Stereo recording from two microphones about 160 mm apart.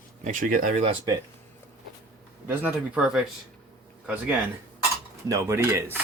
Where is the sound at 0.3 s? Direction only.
55° right (ahead or behind).